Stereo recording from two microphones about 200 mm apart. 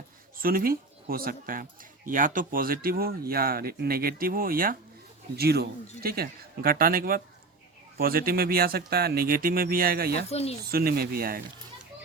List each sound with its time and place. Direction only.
0.3 s speech: 45° right (ahead or behind)
10.2 s speech: 30° left (ahead or behind)
10.7 s speech: 50° right (ahead or behind)